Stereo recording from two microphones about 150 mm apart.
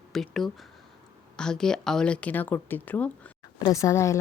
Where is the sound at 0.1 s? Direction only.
Centre (ahead or behind).